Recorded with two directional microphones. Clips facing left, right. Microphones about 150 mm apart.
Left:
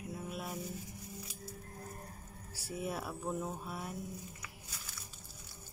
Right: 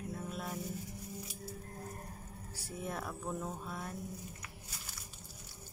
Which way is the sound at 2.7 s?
10° left (ahead or behind).